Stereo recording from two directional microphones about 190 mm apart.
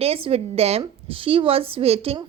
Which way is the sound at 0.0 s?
30° right (ahead or behind).